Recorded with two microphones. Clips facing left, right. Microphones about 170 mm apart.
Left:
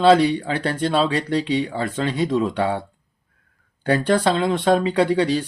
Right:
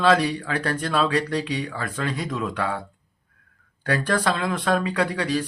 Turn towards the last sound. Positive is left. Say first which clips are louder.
# left 6 dB
turn(degrees=30)  # may be behind; listen again after turning